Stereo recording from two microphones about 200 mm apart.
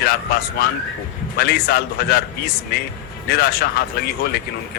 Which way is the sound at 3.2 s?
50° left (ahead or behind).